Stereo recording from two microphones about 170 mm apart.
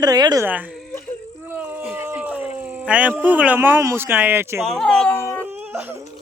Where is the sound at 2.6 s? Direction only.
10° right (ahead or behind).